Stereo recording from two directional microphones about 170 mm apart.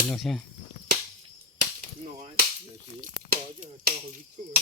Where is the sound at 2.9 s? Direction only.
55° right (ahead or behind).